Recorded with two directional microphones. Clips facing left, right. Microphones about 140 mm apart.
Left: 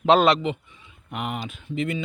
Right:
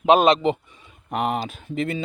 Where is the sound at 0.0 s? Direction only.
15° right (ahead or behind).